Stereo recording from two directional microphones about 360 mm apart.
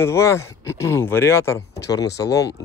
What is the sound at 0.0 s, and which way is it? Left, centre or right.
Speech, centre.